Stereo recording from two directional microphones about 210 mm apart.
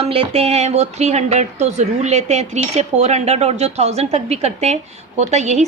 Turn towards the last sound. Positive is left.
turn(degrees=-35)  # may be behind; listen again after turning